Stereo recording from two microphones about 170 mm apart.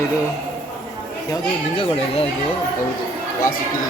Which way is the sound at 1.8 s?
35° left (ahead or behind).